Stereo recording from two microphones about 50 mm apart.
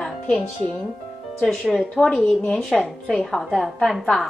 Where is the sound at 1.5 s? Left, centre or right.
Centre.